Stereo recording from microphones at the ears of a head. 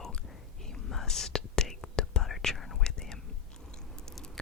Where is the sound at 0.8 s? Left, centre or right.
Left.